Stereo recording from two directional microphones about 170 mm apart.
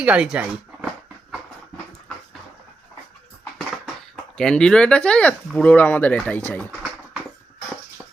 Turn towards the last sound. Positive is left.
turn(degrees=10)  # may be behind; listen again after turning